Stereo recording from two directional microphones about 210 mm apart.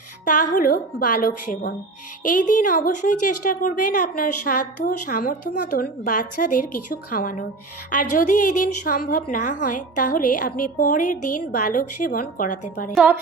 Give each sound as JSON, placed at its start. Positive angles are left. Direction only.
{"t": 0.3, "sound": "a woman's voice", "side_deg": 40}
{"t": 12.9, "sound": "a woman's voice", "side_deg": -5}